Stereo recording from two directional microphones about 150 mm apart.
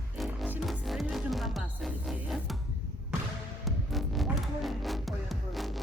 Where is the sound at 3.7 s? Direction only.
Centre (ahead or behind).